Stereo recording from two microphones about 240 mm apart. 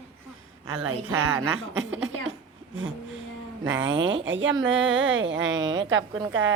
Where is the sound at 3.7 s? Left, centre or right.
Centre.